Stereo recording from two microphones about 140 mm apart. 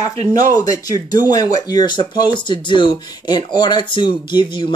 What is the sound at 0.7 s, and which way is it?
Speech, 25° left (ahead or behind).